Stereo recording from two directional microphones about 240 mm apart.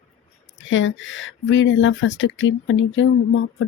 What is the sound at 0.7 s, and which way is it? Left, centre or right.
Speech, left.